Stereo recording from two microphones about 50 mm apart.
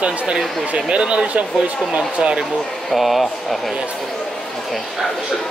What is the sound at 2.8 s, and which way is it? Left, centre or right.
Speech, centre.